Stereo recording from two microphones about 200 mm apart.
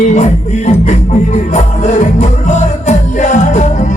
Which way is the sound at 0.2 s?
35° left (ahead or behind).